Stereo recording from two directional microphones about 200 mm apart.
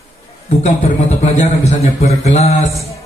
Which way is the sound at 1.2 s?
30° left (ahead or behind).